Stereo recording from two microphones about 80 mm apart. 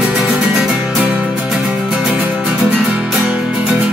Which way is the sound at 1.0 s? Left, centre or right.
Centre.